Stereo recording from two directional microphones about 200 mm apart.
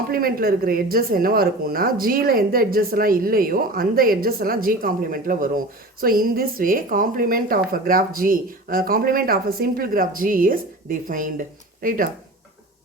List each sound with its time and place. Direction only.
0.1 s a woman's voice: 45° right (ahead or behind)